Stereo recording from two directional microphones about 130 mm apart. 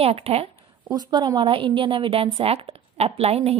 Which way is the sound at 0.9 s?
30° right (ahead or behind).